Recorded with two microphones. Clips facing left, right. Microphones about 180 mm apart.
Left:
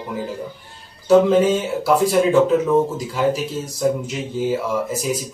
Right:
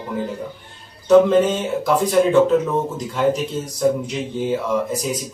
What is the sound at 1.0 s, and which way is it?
Speech, 5° left (ahead or behind).